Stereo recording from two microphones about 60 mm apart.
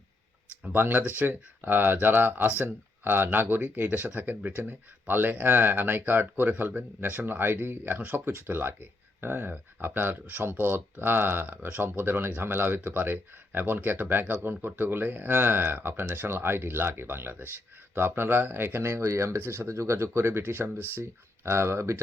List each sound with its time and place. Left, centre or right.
0.6 s speech: right
19.4 s speech: right
19.6 s speech: right